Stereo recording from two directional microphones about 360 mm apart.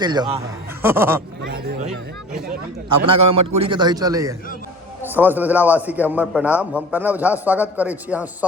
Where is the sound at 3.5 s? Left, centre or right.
Centre.